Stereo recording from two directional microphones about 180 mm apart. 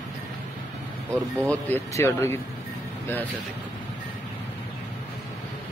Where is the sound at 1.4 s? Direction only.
10° left (ahead or behind).